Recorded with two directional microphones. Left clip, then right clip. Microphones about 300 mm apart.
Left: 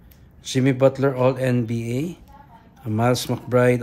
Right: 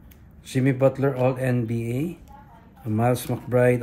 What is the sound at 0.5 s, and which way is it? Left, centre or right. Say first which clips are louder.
Speech: left 3 dB; centre.